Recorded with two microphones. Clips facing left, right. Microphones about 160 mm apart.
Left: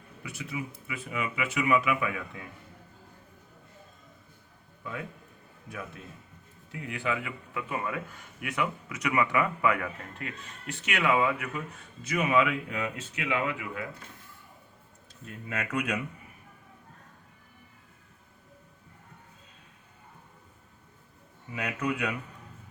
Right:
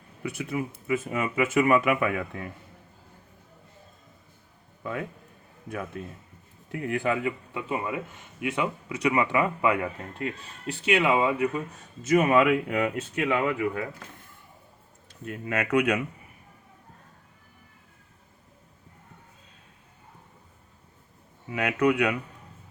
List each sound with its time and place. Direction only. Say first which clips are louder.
0.2 s speech: right 7 dB; 55° right (ahead or behind)
4.8 s a man's voice: right 6 dB; 55° right (ahead or behind)
6.7 s speech: right 6 dB; 50° right (ahead or behind)
7.5 s speech: right 3 dB; 25° right (ahead or behind)
12.0 s speech: right 6 dB; 45° right (ahead or behind)
15.2 s speech: right 6 dB; 60° right (ahead or behind)
21.5 s speech: right 8 dB; 70° right (ahead or behind)